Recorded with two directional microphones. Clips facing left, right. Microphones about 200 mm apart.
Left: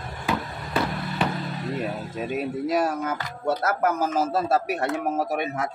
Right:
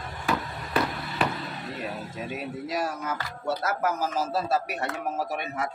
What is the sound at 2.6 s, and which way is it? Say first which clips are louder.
Speech: left 6 dB; 55° left (ahead or behind).